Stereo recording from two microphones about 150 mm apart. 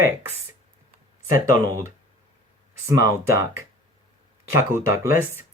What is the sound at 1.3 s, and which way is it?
Speech, 20° right (ahead or behind).